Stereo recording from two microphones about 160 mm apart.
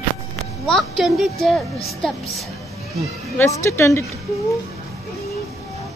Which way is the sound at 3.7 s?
15° left (ahead or behind).